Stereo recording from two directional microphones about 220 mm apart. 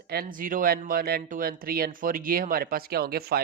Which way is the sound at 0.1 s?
40° right (ahead or behind).